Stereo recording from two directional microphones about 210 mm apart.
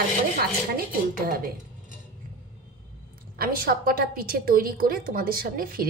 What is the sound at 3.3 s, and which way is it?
A woman's voice, 45° right (ahead or behind).